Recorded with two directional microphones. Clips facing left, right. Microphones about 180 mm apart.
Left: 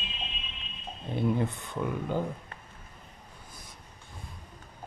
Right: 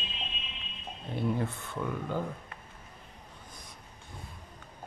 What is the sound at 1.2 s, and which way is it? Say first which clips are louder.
Speech: left 3 dB; 20° left (ahead or behind).